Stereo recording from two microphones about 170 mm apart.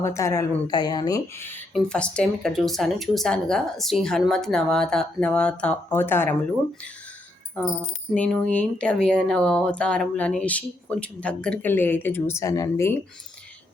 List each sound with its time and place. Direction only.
0.0 s speech: 15° left (ahead or behind)
8.1 s speech: 5° left (ahead or behind)